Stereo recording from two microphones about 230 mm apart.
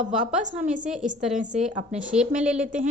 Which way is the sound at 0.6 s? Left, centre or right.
Right.